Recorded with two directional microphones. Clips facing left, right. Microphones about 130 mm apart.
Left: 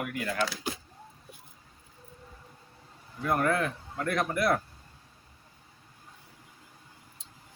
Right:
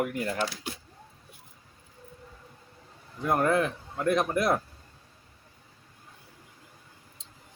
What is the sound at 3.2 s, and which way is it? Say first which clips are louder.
Speech: right 2 dB; 20° right (ahead or behind).